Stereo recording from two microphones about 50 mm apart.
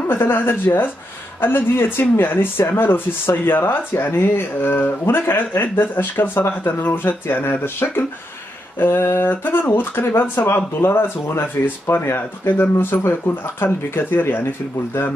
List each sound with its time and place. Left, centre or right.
0.1 s speech: left
10.8 s speech: left
11.9 s speech: left
13.0 s speech: left
13.7 s speech: left